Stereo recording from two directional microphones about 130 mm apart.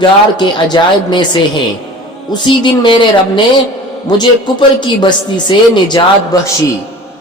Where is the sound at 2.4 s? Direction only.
40° left (ahead or behind).